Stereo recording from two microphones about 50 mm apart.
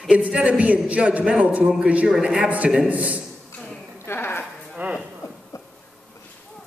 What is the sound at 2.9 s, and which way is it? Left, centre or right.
Speech, right.